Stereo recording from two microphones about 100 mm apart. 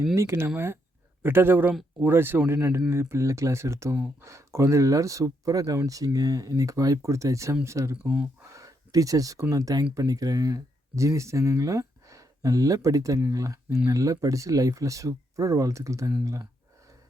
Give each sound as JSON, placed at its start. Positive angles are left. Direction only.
{"t": 0.1, "sound": "speech", "side_deg": -25}
{"t": 8.0, "sound": "speech", "side_deg": -10}
{"t": 8.5, "sound": "speech", "side_deg": -35}